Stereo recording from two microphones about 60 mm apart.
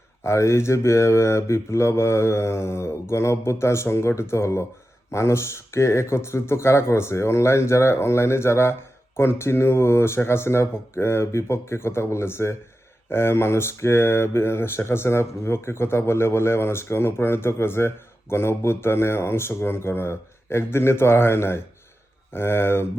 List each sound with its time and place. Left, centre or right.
0.2 s speech: left